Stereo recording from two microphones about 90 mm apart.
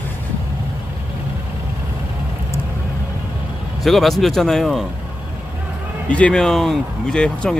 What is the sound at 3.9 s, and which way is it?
Speech, centre (ahead or behind).